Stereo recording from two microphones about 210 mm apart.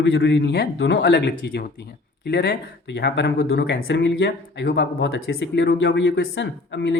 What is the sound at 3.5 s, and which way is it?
Speech, 65° left (ahead or behind).